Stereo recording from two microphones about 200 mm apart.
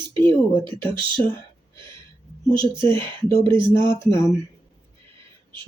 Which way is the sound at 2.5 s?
25° right (ahead or behind).